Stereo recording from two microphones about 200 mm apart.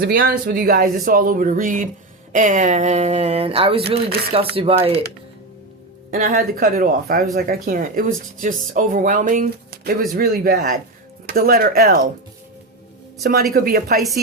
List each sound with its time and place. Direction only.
0.0 s speech: 50° right (ahead or behind); by 5.0 s 30° right (ahead or behind)
6.1 s speech: 40° right (ahead or behind)
13.5 s speech: 45° right (ahead or behind)